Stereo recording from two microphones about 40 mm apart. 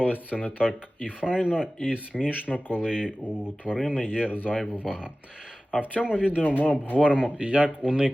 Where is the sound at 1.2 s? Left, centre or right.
Right.